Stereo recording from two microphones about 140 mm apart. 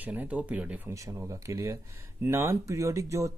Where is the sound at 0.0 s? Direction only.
10° right (ahead or behind).